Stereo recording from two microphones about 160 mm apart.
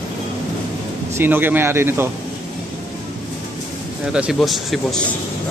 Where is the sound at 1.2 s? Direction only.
10° right (ahead or behind).